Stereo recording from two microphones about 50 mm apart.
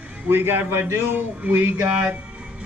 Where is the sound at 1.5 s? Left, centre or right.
Right.